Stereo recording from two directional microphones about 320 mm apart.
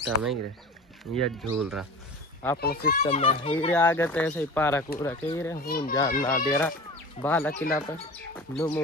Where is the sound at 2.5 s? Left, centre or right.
Left.